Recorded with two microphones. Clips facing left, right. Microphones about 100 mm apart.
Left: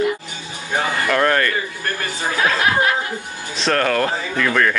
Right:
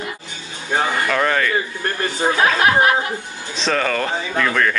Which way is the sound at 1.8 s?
30° right (ahead or behind).